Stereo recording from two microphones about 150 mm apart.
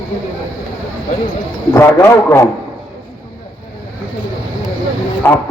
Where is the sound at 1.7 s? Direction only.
20° left (ahead or behind).